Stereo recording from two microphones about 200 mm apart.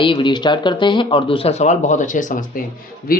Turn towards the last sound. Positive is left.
turn(degrees=45)  # may be behind; listen again after turning